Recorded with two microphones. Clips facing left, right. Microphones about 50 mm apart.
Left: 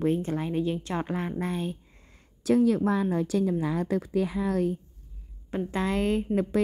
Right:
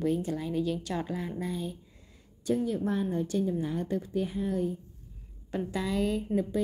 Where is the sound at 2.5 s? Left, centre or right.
Left.